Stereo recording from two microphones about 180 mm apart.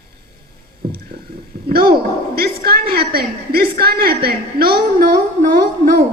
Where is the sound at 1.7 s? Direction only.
55° right (ahead or behind).